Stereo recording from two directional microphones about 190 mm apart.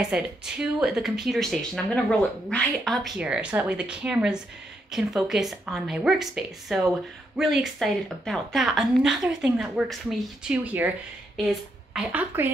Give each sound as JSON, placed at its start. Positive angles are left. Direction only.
{"t": 0.0, "sound": "a woman's voice", "side_deg": -5}